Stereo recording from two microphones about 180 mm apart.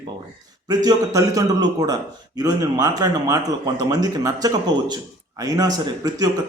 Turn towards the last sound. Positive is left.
turn(degrees=-20)  # may be behind; listen again after turning